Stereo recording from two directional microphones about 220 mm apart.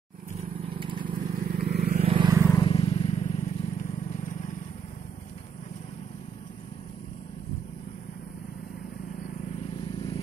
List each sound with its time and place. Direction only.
0.4 s vehicle: 25° right (ahead or behind)
1.4 s vehicle: 45° right (ahead or behind)
2.0 s vehicle: 25° right (ahead or behind)
2.4 s vehicle: 20° left (ahead or behind)
9.9 s vehicle: 25° left (ahead or behind)